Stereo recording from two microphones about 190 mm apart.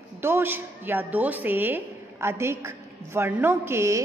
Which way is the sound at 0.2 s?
10° right (ahead or behind).